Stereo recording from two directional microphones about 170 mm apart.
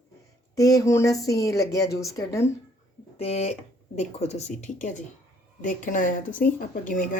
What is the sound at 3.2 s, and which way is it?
Speech, 40° left (ahead or behind).